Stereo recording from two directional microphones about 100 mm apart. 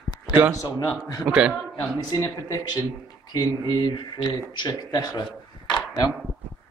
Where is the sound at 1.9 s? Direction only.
35° left (ahead or behind).